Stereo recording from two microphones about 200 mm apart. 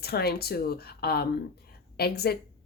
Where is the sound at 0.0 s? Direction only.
50° left (ahead or behind).